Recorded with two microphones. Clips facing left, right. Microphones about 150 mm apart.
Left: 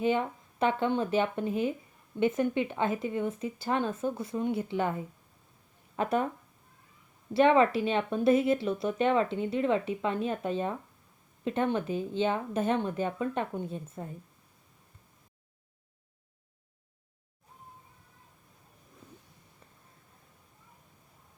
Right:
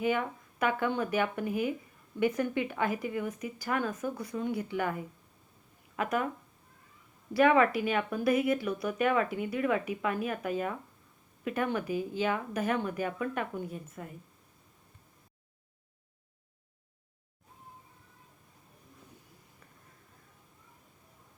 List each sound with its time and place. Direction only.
0.0 s speech: 25° left (ahead or behind)
7.3 s speech: 25° left (ahead or behind)